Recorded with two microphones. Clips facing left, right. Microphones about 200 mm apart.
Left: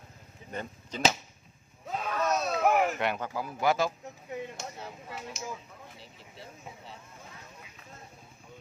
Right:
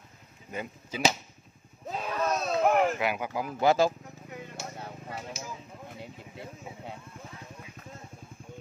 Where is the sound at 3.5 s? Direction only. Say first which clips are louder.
Right 4 dB; 30° right (ahead or behind).